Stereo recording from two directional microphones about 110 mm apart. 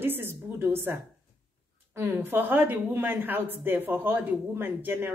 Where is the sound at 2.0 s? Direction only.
20° right (ahead or behind).